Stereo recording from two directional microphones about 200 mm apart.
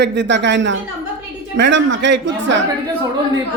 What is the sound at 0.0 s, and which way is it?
Speech, 60° right (ahead or behind).